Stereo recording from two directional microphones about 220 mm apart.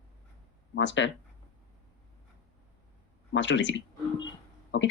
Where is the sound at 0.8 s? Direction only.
55° left (ahead or behind).